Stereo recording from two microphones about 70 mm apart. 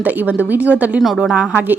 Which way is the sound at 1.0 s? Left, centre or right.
Centre.